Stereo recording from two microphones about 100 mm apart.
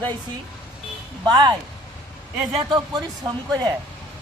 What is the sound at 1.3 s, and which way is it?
Speech, 50° right (ahead or behind).